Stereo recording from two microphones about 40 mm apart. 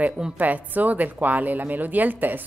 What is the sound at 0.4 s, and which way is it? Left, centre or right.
A woman's voice, right.